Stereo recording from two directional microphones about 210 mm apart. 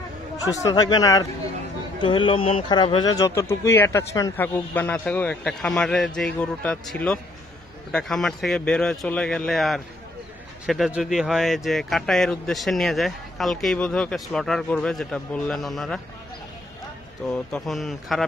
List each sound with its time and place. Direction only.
0.5 s speech: 15° left (ahead or behind); by 16.0 s centre (ahead or behind)
17.3 s speech: 5° left (ahead or behind)